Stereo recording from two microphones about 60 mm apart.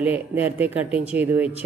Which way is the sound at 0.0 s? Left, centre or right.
Right.